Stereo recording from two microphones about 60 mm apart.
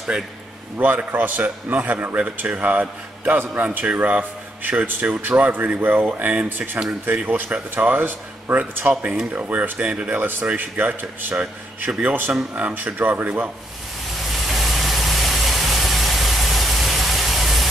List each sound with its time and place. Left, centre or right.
0.7 s a man's voice: right
9.3 s a man's voice: right
10.2 s a man's voice: right
14.3 s vehicle: centre